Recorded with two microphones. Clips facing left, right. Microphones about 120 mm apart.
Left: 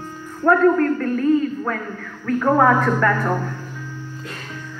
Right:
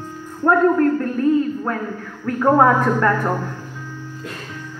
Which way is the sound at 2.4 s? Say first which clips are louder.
Right 2 dB; 25° right (ahead or behind).